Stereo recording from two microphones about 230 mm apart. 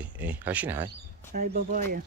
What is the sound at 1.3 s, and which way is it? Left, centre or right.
Speech, right.